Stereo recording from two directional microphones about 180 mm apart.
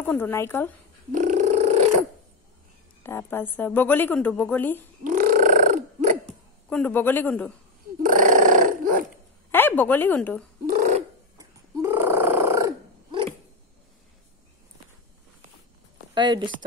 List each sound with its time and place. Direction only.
0.0 s a woman's voice: 10° left (ahead or behind)
1.1 s purr: 45° right (ahead or behind)
3.0 s a woman's voice: 10° left (ahead or behind)
5.0 s burping: 45° right (ahead or behind)
6.2 s a man's voice: 5° left (ahead or behind)
8.0 s dog: 45° right (ahead or behind)
9.5 s a woman's voice: 10° left (ahead or behind)
11.3 s a sound: 15° right (ahead or behind)
16.2 s speech: 25° right (ahead or behind)